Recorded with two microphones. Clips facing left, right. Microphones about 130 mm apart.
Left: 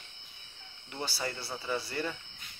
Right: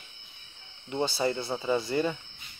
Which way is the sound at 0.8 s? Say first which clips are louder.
Right 9 dB; 20° right (ahead or behind).